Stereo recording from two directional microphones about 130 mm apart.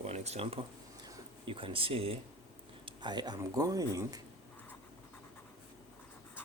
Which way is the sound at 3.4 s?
25° right (ahead or behind).